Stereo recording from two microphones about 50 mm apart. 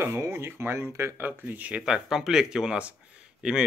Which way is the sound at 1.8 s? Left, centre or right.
Centre.